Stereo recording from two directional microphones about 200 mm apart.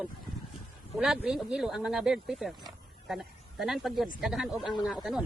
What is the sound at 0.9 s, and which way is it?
Speech, centre (ahead or behind).